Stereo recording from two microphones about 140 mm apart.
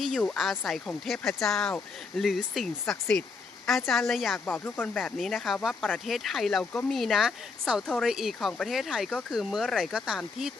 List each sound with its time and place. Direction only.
0.0 s speech: 5° left (ahead or behind)
4.4 s speech: 10° left (ahead or behind)